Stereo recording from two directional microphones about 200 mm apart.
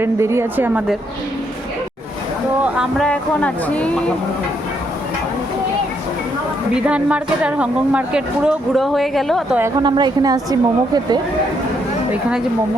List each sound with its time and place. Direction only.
0.0 s a woman's voice: 15° right (ahead or behind)
2.6 s speech: 5° right (ahead or behind)
6.7 s speech: 5° right (ahead or behind)
9.8 s a woman's voice: 20° right (ahead or behind)